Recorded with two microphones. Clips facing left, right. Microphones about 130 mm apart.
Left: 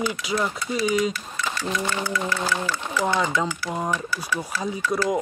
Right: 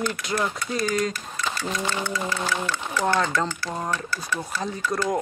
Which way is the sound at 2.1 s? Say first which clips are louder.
Left 2 dB; 20° right (ahead or behind).